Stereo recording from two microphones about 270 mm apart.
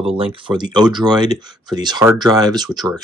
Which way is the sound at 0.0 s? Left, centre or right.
Centre.